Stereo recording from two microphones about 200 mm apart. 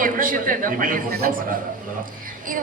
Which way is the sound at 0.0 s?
45° right (ahead or behind).